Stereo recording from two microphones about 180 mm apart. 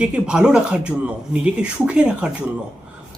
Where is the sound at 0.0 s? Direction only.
5° right (ahead or behind).